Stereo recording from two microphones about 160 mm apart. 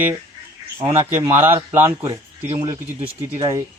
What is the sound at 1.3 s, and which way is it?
Speech, 15° right (ahead or behind).